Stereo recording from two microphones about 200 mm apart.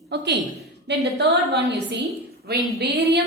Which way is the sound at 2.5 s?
55° right (ahead or behind).